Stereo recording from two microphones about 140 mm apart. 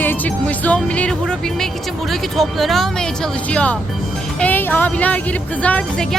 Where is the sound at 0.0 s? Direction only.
10° left (ahead or behind).